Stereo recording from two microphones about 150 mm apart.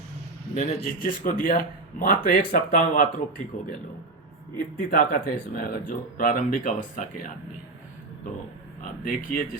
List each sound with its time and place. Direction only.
0.5 s a man's voice: 50° left (ahead or behind)
0.9 s a man's voice: 65° left (ahead or behind)
4.8 s speech: 80° left
8.8 s speech: 65° left (ahead or behind)